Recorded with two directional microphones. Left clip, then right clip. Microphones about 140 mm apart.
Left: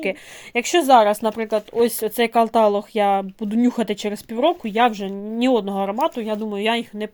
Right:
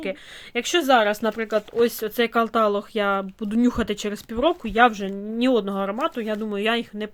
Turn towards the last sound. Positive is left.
turn(degrees=0)  # may be behind; listen again after turning